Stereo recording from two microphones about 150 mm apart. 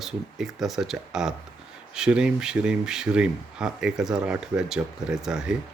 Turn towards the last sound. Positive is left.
turn(degrees=-5)  # may be behind; listen again after turning